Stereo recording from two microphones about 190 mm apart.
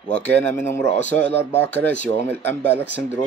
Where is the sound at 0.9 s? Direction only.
40° left (ahead or behind).